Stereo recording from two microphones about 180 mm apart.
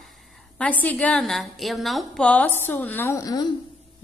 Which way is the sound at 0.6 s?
10° left (ahead or behind).